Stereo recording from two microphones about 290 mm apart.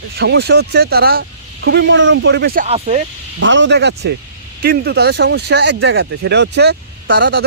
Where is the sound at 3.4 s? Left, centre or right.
Right.